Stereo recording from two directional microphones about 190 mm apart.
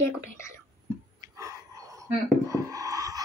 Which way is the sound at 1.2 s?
15° right (ahead or behind).